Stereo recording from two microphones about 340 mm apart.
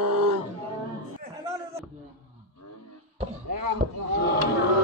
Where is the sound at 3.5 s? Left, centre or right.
Right.